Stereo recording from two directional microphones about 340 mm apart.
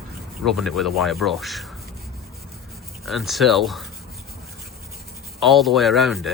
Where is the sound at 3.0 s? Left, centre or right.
Centre.